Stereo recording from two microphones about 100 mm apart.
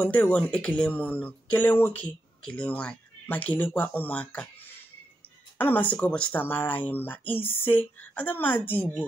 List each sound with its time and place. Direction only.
0.0 s speech: 15° left (ahead or behind)